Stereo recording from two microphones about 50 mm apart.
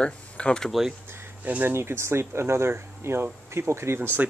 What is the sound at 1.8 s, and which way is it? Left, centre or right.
Speech, right.